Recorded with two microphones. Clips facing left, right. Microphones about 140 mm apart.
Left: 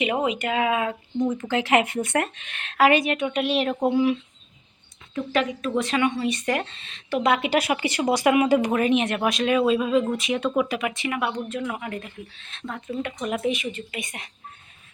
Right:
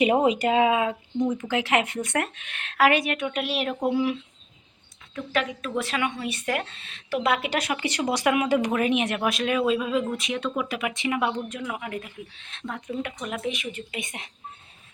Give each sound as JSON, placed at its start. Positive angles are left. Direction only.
{"t": 0.0, "sound": "speech", "side_deg": -35}
{"t": 1.4, "sound": "speech", "side_deg": -10}
{"t": 10.7, "sound": "speech", "side_deg": -5}
{"t": 10.9, "sound": "speech", "side_deg": -20}
{"t": 11.6, "sound": "speech", "side_deg": -5}
{"t": 13.3, "sound": "speech", "side_deg": 5}
{"t": 13.7, "sound": "speech", "side_deg": -20}